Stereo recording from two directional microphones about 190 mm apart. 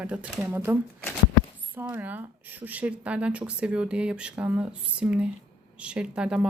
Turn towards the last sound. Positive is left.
turn(degrees=-5)  # may be behind; listen again after turning